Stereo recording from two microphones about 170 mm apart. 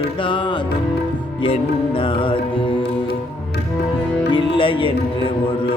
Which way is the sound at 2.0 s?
30° left (ahead or behind).